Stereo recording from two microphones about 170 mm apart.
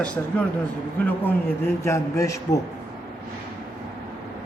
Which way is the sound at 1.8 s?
15° left (ahead or behind).